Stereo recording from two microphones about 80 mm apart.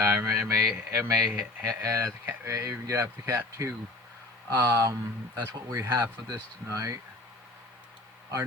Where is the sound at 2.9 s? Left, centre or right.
Right.